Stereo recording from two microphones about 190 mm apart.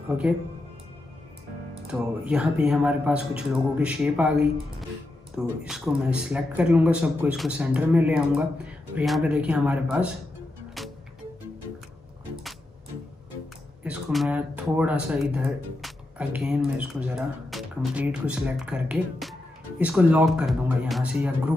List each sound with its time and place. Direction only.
1.9 s speech: 5° right (ahead or behind)
10.8 s music: centre (ahead or behind)
13.8 s speech: 5° right (ahead or behind)